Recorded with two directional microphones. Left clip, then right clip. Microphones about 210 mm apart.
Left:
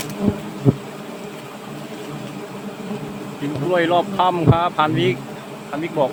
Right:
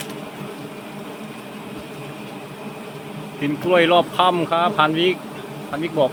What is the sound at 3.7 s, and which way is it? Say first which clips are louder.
Speech: right 2 dB; 10° right (ahead or behind).